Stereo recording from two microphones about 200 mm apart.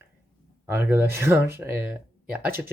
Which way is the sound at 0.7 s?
10° right (ahead or behind).